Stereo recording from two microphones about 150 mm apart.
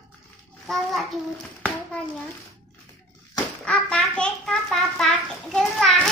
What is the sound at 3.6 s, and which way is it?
Bathtub, 5° left (ahead or behind).